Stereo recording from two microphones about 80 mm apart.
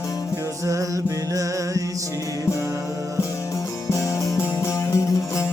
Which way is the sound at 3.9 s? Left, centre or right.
Left.